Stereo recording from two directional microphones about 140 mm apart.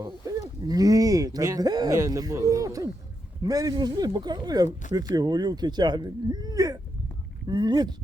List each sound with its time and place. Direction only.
0.0 s speech: 25° right (ahead or behind)